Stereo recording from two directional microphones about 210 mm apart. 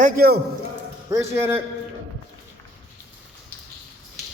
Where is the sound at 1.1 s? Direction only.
15° right (ahead or behind).